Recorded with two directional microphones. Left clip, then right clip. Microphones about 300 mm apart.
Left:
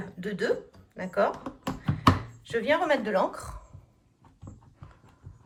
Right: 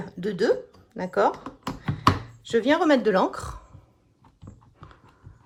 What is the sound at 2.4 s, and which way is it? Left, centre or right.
Speech, centre.